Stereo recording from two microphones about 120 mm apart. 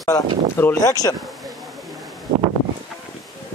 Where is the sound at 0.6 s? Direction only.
30° left (ahead or behind).